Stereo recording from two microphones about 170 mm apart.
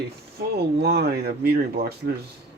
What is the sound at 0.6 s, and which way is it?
Speech, 70° right (ahead or behind).